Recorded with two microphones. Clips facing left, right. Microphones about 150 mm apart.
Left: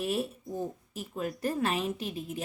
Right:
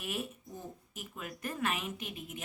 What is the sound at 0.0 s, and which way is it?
A woman's voice, 30° left (ahead or behind).